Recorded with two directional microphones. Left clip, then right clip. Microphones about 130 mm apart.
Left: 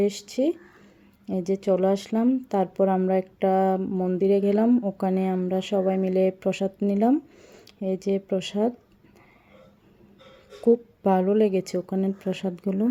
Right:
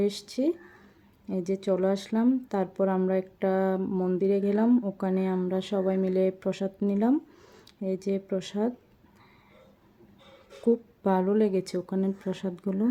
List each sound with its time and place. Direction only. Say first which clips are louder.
0.0 s speech: left 4 dB; 15° left (ahead or behind)
3.8 s a sound: left 2 dB; centre (ahead or behind)
4.2 s speech: left 6 dB; 15° left (ahead or behind)
10.7 s speech: left 5 dB; 15° left (ahead or behind)